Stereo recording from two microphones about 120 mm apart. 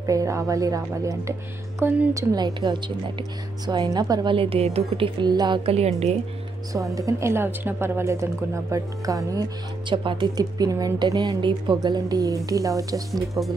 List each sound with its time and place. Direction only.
0.0 s a woman's voice: 25° right (ahead or behind)
1.8 s speech: 15° right (ahead or behind)
2.1 s a woman's voice: 35° right (ahead or behind)
5.7 s a woman's voice: 60° right (ahead or behind)
6.7 s a woman's voice: 30° right (ahead or behind)
13.1 s speech: centre (ahead or behind)